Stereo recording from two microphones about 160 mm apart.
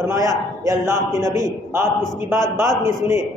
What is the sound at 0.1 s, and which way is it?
A man's voice, 20° right (ahead or behind).